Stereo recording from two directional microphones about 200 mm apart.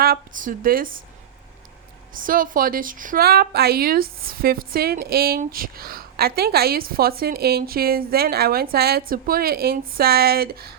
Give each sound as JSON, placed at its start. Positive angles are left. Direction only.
{"t": 0.0, "sound": "speech", "side_deg": -45}
{"t": 2.1, "sound": "a woman's voice", "side_deg": -45}